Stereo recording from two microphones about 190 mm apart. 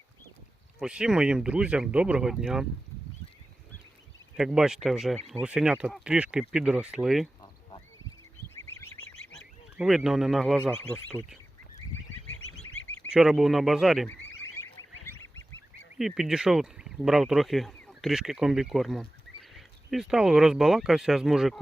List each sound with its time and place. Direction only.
0.8 s speech: 5° right (ahead or behind)
4.4 s speech: 5° right (ahead or behind)
9.7 s speech: 5° right (ahead or behind)
12.5 s goose: 90° left
13.1 s speech: 5° right (ahead or behind)
16.0 s speech: centre (ahead or behind)